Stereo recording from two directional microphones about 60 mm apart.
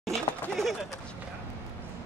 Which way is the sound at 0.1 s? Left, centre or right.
Centre.